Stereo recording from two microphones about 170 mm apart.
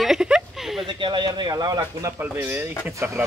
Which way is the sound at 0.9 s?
25° right (ahead or behind).